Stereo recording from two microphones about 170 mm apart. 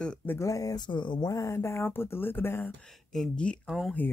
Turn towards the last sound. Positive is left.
turn(degrees=0)  # may be behind; listen again after turning